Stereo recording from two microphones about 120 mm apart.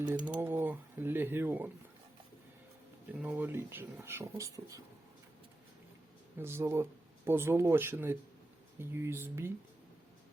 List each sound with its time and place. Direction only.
0.3 s speech: 15° right (ahead or behind)
3.1 s speech: 15° right (ahead or behind)
6.4 s speech: 20° right (ahead or behind)